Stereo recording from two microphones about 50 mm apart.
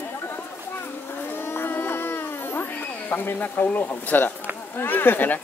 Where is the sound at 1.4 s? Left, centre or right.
Left.